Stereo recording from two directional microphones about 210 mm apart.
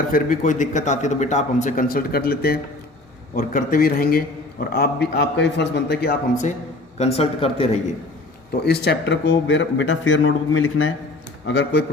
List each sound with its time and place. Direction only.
0.1 s a man's voice: 40° left (ahead or behind)
7.0 s speech: 30° left (ahead or behind)
8.6 s speech: 50° left (ahead or behind); by 10.9 s 70° left (ahead or behind)
11.4 s speech: 55° left (ahead or behind)